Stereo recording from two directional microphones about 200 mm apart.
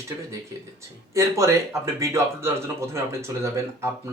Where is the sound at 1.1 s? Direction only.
15° right (ahead or behind).